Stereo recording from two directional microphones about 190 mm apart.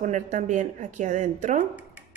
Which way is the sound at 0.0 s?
40° right (ahead or behind).